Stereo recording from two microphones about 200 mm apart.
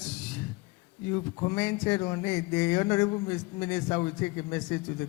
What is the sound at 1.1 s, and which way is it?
A man's voice, 15° left (ahead or behind).